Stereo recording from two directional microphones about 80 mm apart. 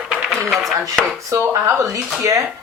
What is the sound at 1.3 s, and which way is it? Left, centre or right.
Speech, right.